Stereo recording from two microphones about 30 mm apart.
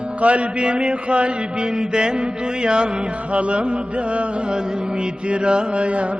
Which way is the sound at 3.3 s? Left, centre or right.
Right.